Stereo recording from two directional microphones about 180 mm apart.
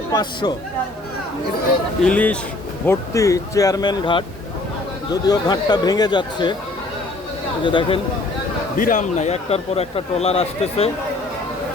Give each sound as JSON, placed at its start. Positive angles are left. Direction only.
{"t": 0.1, "sound": "speech", "side_deg": 20}
{"t": 2.0, "sound": "speech", "side_deg": 5}
{"t": 5.3, "sound": "speech", "side_deg": 25}
{"t": 7.6, "sound": "speech", "side_deg": 25}
{"t": 8.8, "sound": "a man's voice", "side_deg": 45}